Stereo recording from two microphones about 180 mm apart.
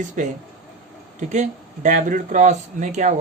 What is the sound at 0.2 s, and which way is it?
Speech, 45° right (ahead or behind).